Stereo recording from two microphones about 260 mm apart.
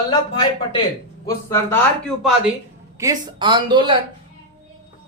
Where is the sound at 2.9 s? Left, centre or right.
Centre.